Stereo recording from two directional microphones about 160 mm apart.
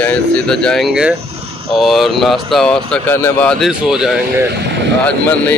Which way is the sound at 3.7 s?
5° right (ahead or behind).